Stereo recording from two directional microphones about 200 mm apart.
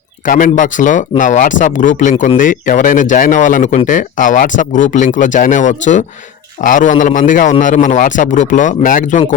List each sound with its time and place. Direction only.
0.3 s speech: 40° left (ahead or behind)